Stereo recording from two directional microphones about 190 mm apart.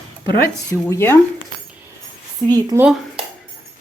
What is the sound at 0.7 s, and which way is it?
Speech, 15° left (ahead or behind).